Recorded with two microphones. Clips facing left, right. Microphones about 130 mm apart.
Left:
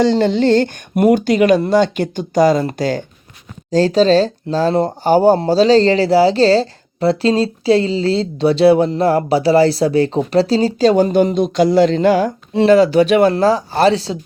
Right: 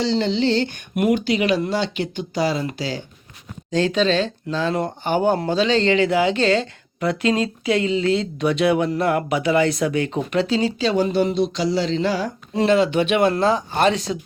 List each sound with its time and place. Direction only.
0.0 s speech: 50° left (ahead or behind)
3.7 s speech: 35° left (ahead or behind)
12.6 s speech: 40° left (ahead or behind)